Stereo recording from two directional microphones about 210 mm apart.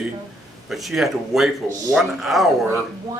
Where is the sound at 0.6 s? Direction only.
Centre (ahead or behind).